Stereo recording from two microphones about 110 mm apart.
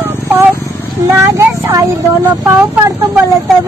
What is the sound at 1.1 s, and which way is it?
Speech, 25° right (ahead or behind).